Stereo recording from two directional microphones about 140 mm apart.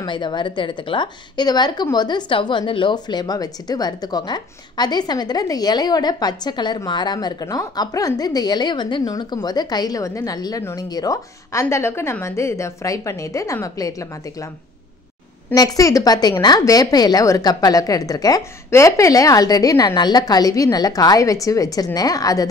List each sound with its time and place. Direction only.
0.0 s a woman's voice: 35° left (ahead or behind)
15.5 s a woman's voice: 25° left (ahead or behind)